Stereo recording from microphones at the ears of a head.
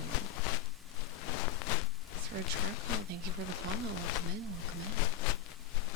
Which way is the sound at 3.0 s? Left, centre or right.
Right.